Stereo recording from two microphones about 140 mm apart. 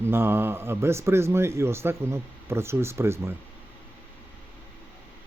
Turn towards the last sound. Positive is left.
turn(degrees=-20)  # may be behind; listen again after turning